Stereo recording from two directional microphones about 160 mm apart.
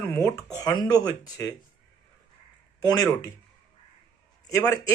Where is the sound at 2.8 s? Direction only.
25° left (ahead or behind).